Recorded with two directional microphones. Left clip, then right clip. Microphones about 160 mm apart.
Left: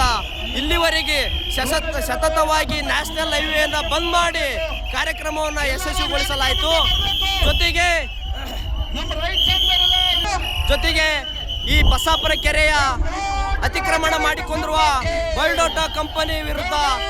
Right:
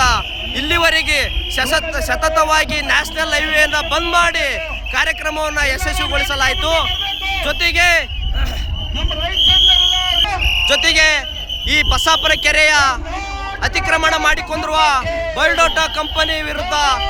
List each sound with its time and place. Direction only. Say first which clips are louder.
0.0 s a man's voice: right 5 dB; 5° left (ahead or behind)
9.2 s a sound: right 6 dB; 40° right (ahead or behind)
10.7 s a man's voice: right 5 dB; centre (ahead or behind)